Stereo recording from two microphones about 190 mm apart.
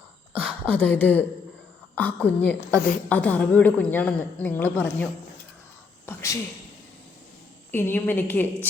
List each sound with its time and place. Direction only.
0.3 s a woman's voice: 10° left (ahead or behind)
6.1 s a woman's voice: 15° left (ahead or behind)
7.7 s a woman's voice: 10° left (ahead or behind)